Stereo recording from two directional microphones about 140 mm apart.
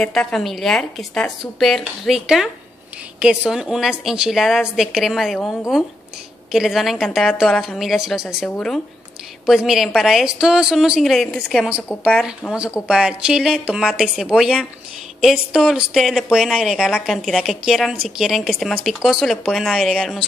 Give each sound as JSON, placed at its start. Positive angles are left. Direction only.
{"t": 0.0, "sound": "a woman's voice", "side_deg": 5}
{"t": 8.5, "sound": "speech", "side_deg": 10}
{"t": 9.5, "sound": "a woman's voice", "side_deg": -5}